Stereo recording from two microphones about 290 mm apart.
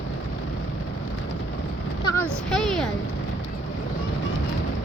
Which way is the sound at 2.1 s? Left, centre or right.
Centre.